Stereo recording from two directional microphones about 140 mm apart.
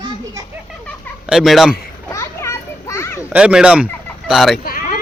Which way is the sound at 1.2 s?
5° right (ahead or behind).